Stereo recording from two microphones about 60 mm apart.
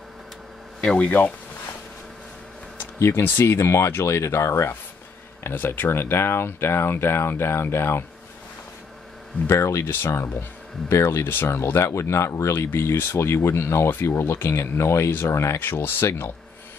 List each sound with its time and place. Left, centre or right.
0.7 s speech: centre
3.0 s speech: left
5.4 s speech: left
9.5 s speech: left
9.8 s speech: left
12.5 s speech: left